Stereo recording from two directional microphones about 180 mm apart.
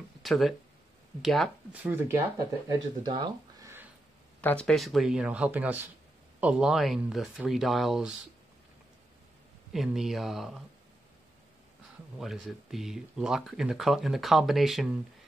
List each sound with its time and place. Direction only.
0.2 s speech: centre (ahead or behind)
3.0 s speech: 25° right (ahead or behind)
3.6 s a sound: 10° right (ahead or behind)
4.4 s speech: 10° left (ahead or behind)
9.7 s speech: centre (ahead or behind)
12.2 s speech: centre (ahead or behind)